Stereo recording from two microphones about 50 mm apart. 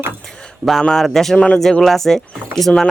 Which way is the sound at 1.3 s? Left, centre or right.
Centre.